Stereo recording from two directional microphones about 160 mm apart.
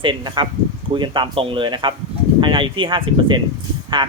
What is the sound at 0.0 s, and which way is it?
Speech, 30° right (ahead or behind).